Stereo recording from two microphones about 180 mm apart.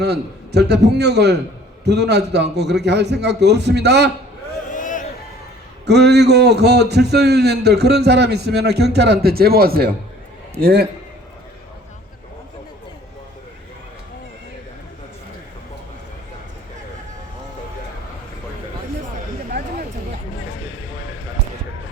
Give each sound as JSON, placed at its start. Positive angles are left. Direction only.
{"t": 0.0, "sound": "a man's voice", "side_deg": -65}
{"t": 4.7, "sound": "a sound", "side_deg": 45}
{"t": 5.8, "sound": "a man's voice", "side_deg": -70}